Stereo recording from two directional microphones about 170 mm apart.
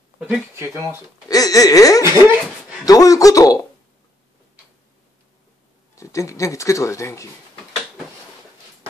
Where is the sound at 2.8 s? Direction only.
20° left (ahead or behind).